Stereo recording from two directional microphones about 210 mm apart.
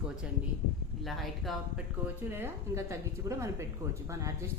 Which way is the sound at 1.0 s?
Centre (ahead or behind).